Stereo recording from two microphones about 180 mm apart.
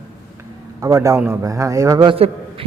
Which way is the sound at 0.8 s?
15° right (ahead or behind).